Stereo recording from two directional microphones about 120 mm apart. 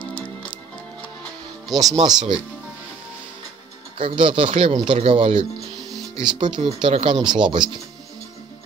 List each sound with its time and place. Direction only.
1.2 s music: 30° right (ahead or behind)
2.0 s speech: 35° right (ahead or behind)
4.0 s speech: 45° right (ahead or behind)
5.8 s music: centre (ahead or behind)
6.2 s speech: 40° right (ahead or behind)